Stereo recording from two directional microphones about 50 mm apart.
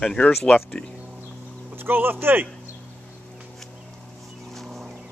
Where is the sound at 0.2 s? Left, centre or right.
Left.